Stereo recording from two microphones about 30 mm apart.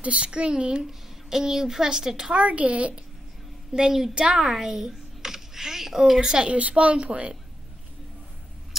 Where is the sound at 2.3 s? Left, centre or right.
Right.